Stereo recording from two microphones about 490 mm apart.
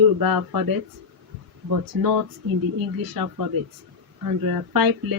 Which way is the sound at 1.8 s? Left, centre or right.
Right.